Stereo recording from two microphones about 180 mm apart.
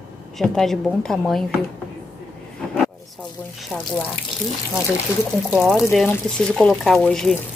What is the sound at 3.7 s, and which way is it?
Speech, 10° right (ahead or behind).